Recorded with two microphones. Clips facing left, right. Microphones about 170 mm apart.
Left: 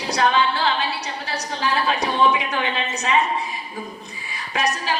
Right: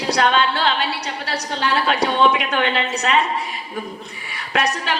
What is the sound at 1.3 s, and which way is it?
Speech, 75° right (ahead or behind).